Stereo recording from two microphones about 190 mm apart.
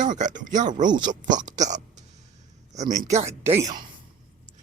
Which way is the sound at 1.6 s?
40° right (ahead or behind).